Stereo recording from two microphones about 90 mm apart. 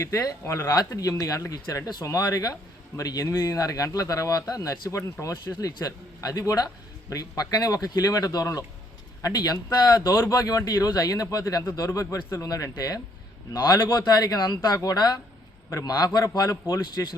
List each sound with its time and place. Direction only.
0.0 s speech: 40° left (ahead or behind)
10.1 s speech: 35° left (ahead or behind)
13.7 s speech: 55° left (ahead or behind); by 17.1 s 35° left (ahead or behind)